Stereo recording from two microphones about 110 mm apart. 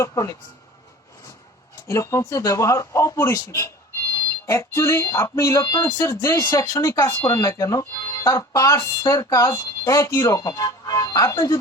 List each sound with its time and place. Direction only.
0.0 s speech: 30° left (ahead or behind)
1.9 s speech: 30° left (ahead or behind)